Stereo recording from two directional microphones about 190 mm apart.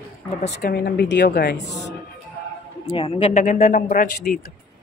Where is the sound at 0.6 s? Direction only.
55° left (ahead or behind).